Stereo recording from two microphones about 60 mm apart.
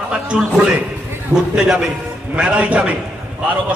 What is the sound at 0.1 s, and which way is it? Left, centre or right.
A man's voice, centre.